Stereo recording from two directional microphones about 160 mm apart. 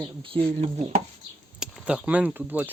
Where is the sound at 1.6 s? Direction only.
5° right (ahead or behind).